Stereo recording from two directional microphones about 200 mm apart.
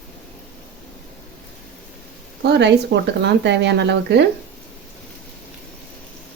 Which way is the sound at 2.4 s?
60° right (ahead or behind).